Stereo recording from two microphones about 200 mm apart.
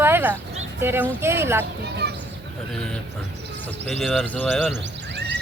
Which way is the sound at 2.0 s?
55° right (ahead or behind).